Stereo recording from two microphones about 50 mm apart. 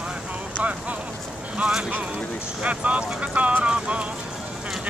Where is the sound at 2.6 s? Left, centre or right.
Right.